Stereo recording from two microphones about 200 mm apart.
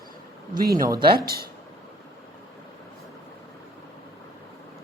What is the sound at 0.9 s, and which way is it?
Speech, 20° right (ahead or behind).